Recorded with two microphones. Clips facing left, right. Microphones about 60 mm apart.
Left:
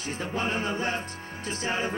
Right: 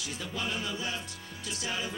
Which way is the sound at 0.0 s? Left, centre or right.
Left.